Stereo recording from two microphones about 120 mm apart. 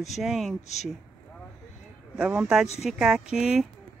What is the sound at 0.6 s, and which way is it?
Speech, 70° left (ahead or behind).